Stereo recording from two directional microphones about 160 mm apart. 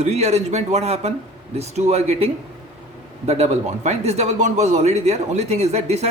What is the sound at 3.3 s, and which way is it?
A man's voice, 45° right (ahead or behind).